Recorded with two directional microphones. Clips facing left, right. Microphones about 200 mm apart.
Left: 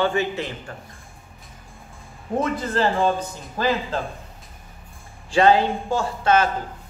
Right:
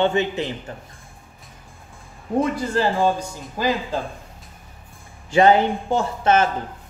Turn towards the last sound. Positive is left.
turn(degrees=-25)  # may be behind; listen again after turning